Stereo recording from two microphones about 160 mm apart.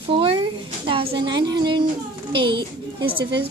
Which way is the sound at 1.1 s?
30° right (ahead or behind).